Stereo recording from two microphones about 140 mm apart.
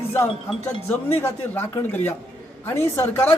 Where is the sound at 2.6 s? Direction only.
15° left (ahead or behind).